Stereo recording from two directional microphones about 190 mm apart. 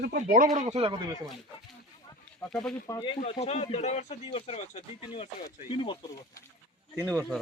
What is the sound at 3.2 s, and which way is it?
Speech, 35° left (ahead or behind).